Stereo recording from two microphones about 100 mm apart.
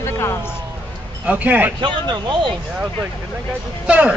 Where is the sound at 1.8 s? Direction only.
50° right (ahead or behind).